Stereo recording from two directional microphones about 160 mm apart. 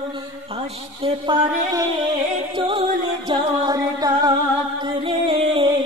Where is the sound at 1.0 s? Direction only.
35° right (ahead or behind).